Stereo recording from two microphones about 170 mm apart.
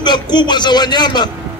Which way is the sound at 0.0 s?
25° left (ahead or behind).